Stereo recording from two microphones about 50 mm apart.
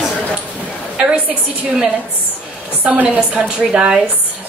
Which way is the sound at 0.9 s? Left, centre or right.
Centre.